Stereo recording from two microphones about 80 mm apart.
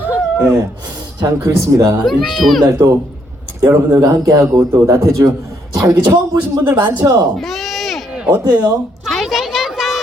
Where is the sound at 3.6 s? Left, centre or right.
Right.